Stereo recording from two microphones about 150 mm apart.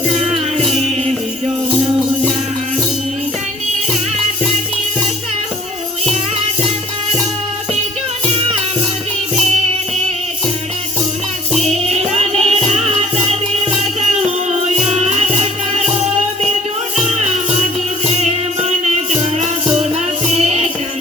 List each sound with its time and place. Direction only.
11.8 s music: 45° right (ahead or behind)
14.8 s music: 45° right (ahead or behind)
20.2 s music: 45° right (ahead or behind)